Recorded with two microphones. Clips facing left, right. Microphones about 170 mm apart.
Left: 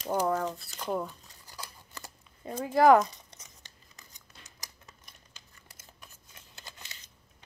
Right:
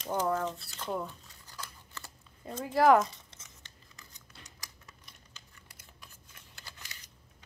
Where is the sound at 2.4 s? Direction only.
Centre (ahead or behind).